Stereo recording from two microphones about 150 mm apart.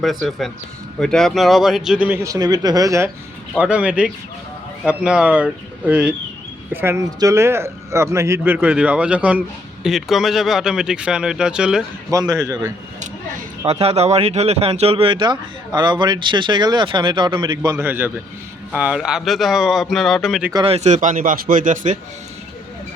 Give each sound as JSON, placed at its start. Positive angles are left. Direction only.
{"t": 0.0, "sound": "a man's voice", "side_deg": 0}
{"t": 3.6, "sound": "a man's voice", "side_deg": -10}
{"t": 12.1, "sound": "a man's voice", "side_deg": -20}
{"t": 13.7, "sound": "speech", "side_deg": -45}
{"t": 17.8, "sound": "a man's voice", "side_deg": -15}
{"t": 20.5, "sound": "a man's voice", "side_deg": -30}
{"t": 20.7, "sound": "speech", "side_deg": -50}